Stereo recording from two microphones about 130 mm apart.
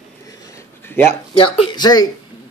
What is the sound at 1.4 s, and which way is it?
Speech, 40° left (ahead or behind).